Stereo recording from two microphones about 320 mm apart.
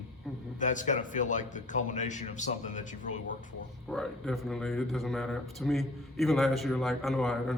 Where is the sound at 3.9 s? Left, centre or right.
Centre.